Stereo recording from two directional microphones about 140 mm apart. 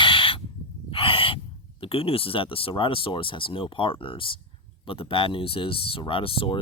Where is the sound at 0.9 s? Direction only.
40° left (ahead or behind).